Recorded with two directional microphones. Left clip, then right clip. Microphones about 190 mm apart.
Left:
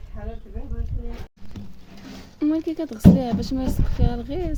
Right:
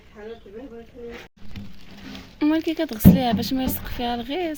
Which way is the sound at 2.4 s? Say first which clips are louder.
Right 2 dB; centre (ahead or behind).